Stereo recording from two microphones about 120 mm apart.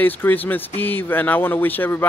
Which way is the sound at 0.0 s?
15° left (ahead or behind).